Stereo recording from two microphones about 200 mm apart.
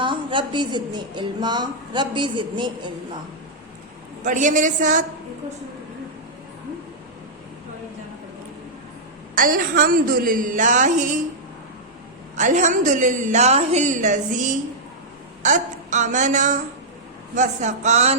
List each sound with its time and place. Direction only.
0.0 s speech: 25° right (ahead or behind)
4.2 s a woman's voice: 40° right (ahead or behind)
9.3 s a woman's voice: 45° right (ahead or behind)
12.4 s a woman's voice: 40° right (ahead or behind)